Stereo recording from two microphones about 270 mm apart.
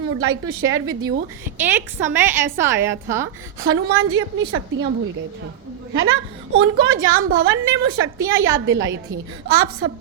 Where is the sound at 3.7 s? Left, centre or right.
Right.